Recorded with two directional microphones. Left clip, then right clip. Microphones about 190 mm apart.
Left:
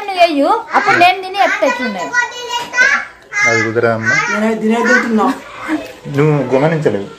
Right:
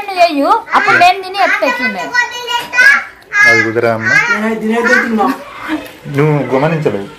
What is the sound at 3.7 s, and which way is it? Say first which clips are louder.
Speech: right 1 dB; 15° right (ahead or behind).